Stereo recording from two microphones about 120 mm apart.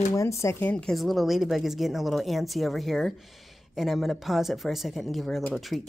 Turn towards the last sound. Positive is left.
turn(degrees=0)  # may be behind; listen again after turning